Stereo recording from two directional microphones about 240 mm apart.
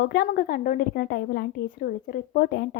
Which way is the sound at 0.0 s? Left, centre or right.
Left.